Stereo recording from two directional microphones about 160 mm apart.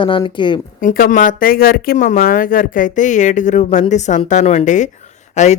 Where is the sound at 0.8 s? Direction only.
60° left (ahead or behind).